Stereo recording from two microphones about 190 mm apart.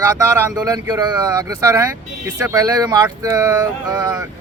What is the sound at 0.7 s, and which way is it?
Speech, 20° right (ahead or behind).